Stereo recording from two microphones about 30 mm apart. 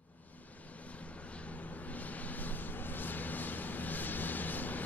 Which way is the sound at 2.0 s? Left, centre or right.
Left.